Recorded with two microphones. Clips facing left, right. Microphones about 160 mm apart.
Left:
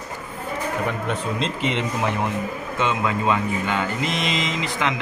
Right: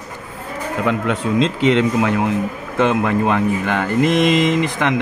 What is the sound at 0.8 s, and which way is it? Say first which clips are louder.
Speech: right 6 dB; 90° right.